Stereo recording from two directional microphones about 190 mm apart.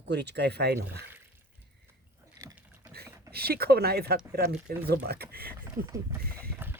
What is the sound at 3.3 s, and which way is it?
Speech, 55° right (ahead or behind).